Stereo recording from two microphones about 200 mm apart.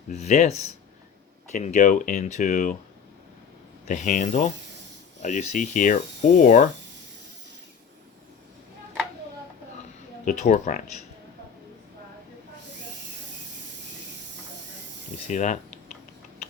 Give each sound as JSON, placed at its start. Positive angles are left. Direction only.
{"t": 0.1, "sound": "speech", "side_deg": 35}
{"t": 3.8, "sound": "speech", "side_deg": 40}
{"t": 10.2, "sound": "speech", "side_deg": 40}
{"t": 15.3, "sound": "speech", "side_deg": 35}